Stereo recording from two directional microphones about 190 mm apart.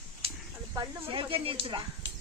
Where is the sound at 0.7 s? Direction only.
25° right (ahead or behind).